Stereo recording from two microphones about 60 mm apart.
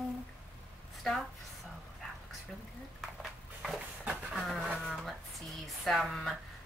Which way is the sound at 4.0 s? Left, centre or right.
Right.